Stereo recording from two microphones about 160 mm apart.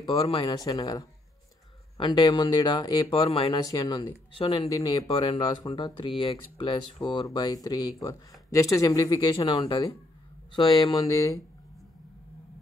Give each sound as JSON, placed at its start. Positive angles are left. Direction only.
{"t": 0.0, "sound": "speech", "side_deg": 35}